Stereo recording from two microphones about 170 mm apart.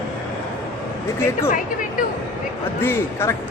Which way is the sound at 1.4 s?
55° left (ahead or behind).